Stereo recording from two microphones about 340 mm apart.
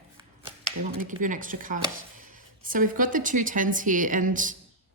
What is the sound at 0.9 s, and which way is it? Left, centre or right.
A woman's voice, right.